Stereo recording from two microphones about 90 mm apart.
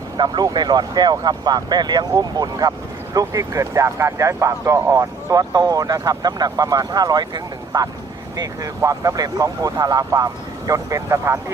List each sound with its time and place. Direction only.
0.2 s speech: 55° right (ahead or behind); by 11.5 s 35° right (ahead or behind)